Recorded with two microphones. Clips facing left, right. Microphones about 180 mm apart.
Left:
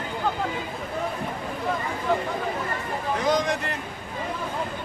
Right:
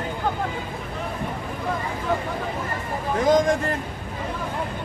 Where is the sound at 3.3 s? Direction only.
50° right (ahead or behind).